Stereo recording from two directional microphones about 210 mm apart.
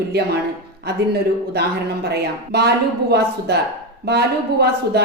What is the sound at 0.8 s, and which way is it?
A woman's voice, 50° right (ahead or behind).